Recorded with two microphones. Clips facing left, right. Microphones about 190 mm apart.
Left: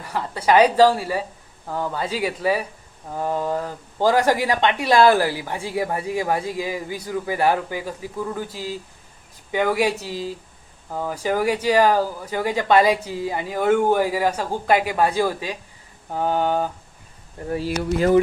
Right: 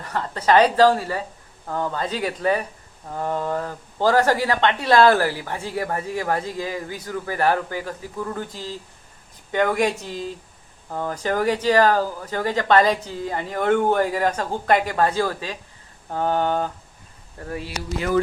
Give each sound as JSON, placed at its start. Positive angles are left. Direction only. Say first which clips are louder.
{"t": 0.0, "sound": "speech", "louder": "even", "side_deg": 10}